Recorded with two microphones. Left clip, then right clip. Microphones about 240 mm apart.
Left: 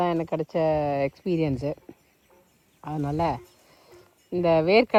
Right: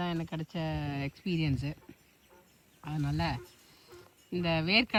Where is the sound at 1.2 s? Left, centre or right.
Right.